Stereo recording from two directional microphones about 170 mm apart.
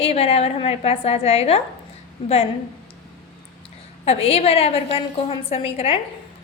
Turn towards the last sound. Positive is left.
turn(degrees=35)  # may be behind; listen again after turning